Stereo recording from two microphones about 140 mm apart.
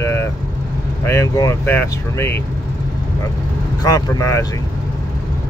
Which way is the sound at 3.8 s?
25° left (ahead or behind).